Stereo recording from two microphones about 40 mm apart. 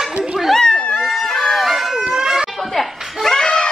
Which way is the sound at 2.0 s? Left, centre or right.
Centre.